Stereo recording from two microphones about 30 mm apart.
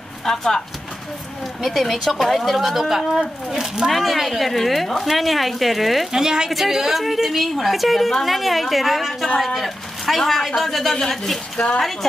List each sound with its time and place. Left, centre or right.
0.2 s a woman's voice: centre
3.8 s a woman's voice: centre
6.1 s a woman's voice: right
6.5 s a woman's voice: centre
11.5 s speech: left